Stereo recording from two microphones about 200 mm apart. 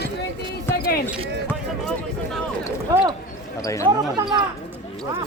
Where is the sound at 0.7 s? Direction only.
50° left (ahead or behind).